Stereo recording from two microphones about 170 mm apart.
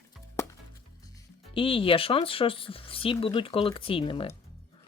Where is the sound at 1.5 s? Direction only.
30° left (ahead or behind).